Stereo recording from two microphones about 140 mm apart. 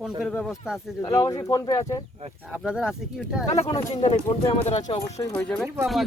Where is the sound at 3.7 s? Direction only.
50° left (ahead or behind).